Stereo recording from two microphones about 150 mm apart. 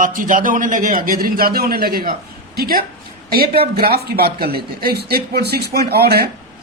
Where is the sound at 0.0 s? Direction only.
65° right (ahead or behind).